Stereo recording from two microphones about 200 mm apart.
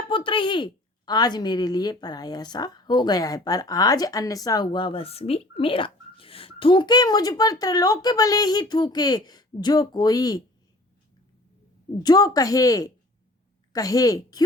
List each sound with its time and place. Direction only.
0.1 s a woman's voice: 25° left (ahead or behind)
12.0 s a woman's voice: 20° left (ahead or behind)